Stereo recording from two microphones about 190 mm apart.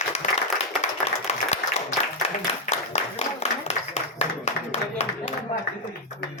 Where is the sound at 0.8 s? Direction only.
35° left (ahead or behind).